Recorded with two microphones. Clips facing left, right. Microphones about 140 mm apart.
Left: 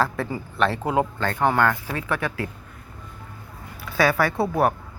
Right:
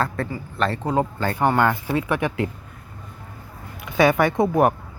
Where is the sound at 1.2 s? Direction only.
10° right (ahead or behind).